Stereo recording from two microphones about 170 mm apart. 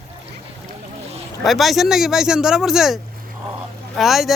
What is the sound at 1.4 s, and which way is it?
Speech, centre (ahead or behind).